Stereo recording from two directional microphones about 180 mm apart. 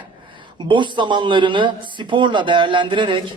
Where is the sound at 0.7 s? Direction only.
25° right (ahead or behind).